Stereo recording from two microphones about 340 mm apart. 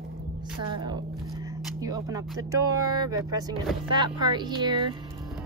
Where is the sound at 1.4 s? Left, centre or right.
Centre.